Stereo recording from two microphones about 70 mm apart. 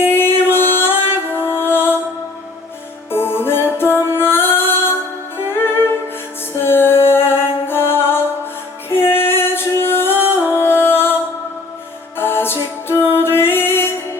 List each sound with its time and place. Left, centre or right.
0.0 s music: left
3.1 s music: left